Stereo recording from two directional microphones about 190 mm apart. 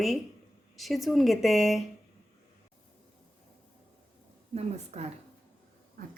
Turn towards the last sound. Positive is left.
turn(degrees=-35)  # may be behind; listen again after turning